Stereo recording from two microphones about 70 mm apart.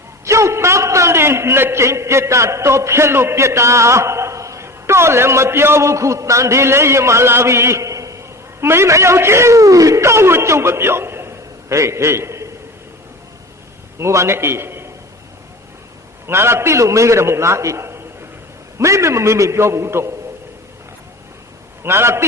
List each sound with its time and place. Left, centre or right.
0.3 s a man's voice: right
8.6 s a man's voice: right
14.0 s a man's voice: right
16.2 s a man's voice: right
21.8 s a man's voice: right